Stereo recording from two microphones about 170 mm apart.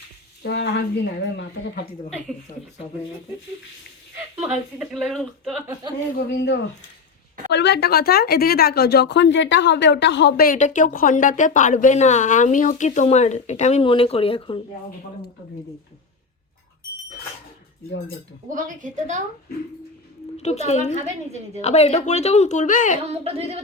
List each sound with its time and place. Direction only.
0.4 s speech: 85° left
4.4 s speech: 10° right (ahead or behind)
4.9 s speech: centre (ahead or behind)
6.1 s a man's voice: 90° left; by 14.6 s 30° left (ahead or behind)
18.5 s a woman's voice: 45° right (ahead or behind)
20.4 s speech: 40° left (ahead or behind)
23.0 s speech: 40° right (ahead or behind)